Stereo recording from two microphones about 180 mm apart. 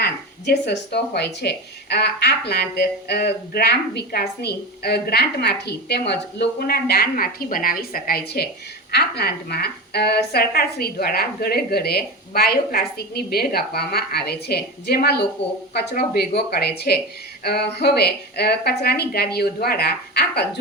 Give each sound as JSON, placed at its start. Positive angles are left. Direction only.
{"t": 0.0, "sound": "speech", "side_deg": 70}